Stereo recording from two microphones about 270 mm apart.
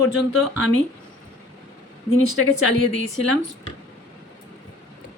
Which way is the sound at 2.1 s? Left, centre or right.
Right.